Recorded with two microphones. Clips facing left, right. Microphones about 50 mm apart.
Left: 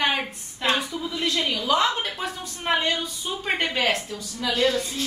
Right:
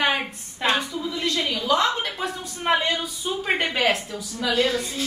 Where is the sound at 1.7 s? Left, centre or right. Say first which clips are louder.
Right 1 dB; centre.